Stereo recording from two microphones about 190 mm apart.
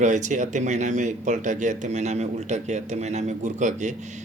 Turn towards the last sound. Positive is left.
turn(degrees=-40)  # may be behind; listen again after turning